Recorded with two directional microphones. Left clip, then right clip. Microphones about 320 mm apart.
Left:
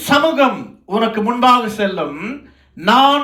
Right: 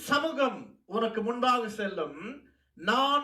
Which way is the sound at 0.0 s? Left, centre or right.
Left.